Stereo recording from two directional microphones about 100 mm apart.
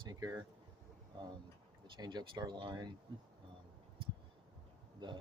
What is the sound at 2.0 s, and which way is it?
Speech, 45° right (ahead or behind).